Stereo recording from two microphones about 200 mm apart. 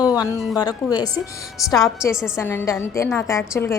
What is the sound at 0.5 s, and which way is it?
Speech, 20° left (ahead or behind).